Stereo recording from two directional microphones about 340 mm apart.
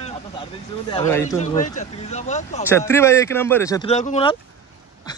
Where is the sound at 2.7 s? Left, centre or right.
Centre.